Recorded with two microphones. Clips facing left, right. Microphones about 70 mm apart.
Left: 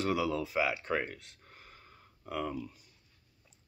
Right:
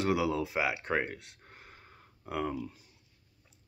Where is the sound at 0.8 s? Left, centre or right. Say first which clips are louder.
Right 2 dB; right.